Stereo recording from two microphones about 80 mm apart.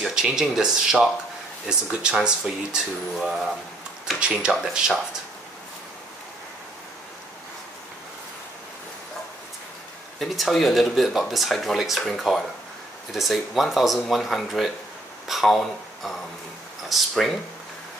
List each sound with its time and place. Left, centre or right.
0.0 s speech: centre
10.1 s speech: centre